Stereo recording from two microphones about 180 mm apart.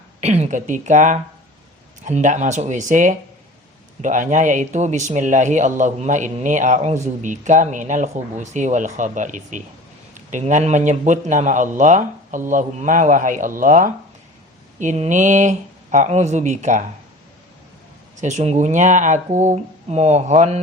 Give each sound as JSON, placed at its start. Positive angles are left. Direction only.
{"t": 0.2, "sound": "speech", "side_deg": -35}
{"t": 18.2, "sound": "speech", "side_deg": -40}